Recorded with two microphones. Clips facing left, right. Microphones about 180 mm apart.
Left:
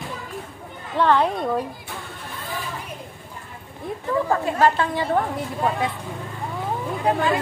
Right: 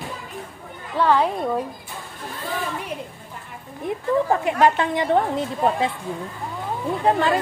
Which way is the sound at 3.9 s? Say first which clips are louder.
Right 2 dB; 20° right (ahead or behind).